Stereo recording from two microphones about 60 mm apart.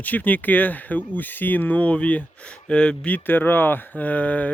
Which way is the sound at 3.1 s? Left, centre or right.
Left.